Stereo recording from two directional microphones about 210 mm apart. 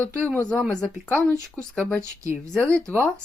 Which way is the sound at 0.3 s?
10° left (ahead or behind).